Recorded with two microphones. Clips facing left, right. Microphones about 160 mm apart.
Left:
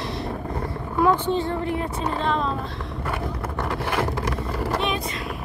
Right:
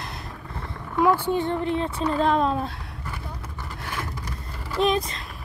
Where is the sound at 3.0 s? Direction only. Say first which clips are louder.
Left 9 dB; 70° left (ahead or behind).